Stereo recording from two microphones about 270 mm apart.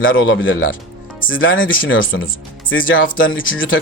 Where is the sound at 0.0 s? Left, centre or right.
Left.